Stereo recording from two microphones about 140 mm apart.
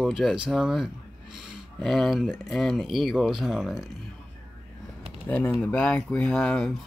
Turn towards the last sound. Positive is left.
turn(degrees=5)  # may be behind; listen again after turning